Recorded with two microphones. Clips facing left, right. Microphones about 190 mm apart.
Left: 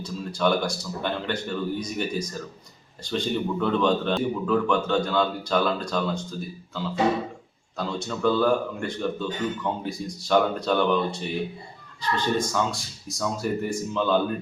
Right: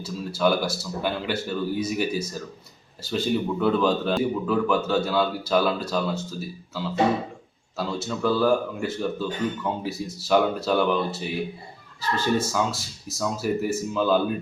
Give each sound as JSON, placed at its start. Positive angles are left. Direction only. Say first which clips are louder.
{"t": 0.0, "sound": "speech", "louder": "right 1 dB", "side_deg": -5}